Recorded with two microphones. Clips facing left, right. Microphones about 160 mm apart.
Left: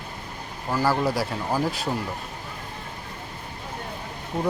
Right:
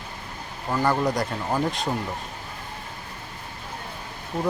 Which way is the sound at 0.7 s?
5° left (ahead or behind).